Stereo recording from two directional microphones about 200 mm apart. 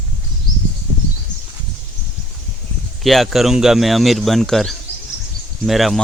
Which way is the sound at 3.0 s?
Centre (ahead or behind).